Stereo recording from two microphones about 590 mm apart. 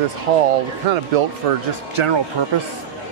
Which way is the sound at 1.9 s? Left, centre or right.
Right.